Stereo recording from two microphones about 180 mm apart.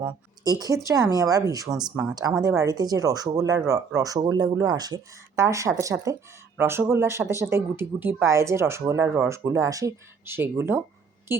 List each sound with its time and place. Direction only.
0.0 s speech: 20° right (ahead or behind)